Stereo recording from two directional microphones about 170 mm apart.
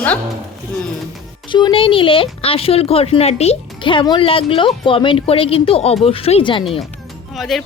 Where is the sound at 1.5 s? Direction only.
30° left (ahead or behind).